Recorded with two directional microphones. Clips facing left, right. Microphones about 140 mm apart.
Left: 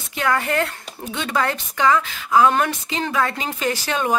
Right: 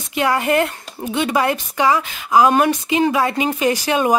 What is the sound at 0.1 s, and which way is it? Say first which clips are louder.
Speech: right 4 dB; 15° right (ahead or behind).